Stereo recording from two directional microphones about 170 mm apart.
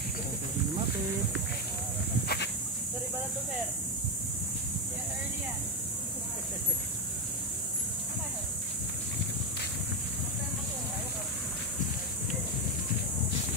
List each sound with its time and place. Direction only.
2.2 s goat: 80° left